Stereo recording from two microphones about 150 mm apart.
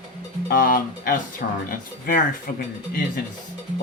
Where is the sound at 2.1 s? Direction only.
65° left (ahead or behind).